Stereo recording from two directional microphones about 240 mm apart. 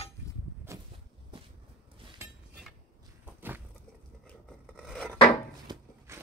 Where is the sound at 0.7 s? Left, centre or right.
Centre.